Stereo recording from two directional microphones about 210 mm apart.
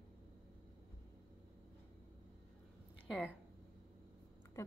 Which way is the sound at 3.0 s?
Centre (ahead or behind).